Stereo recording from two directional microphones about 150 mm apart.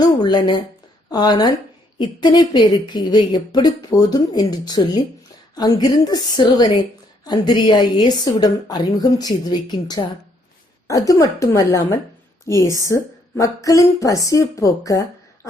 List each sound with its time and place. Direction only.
0.0 s a woman's voice: 30° left (ahead or behind)